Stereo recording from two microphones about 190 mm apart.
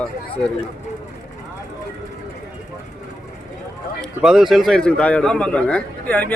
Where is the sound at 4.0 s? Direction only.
Centre (ahead or behind).